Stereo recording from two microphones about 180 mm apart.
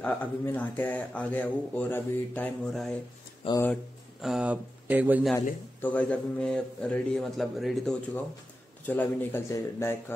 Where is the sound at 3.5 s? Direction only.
30° left (ahead or behind).